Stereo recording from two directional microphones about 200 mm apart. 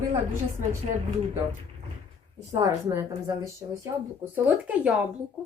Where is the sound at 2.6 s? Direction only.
15° right (ahead or behind).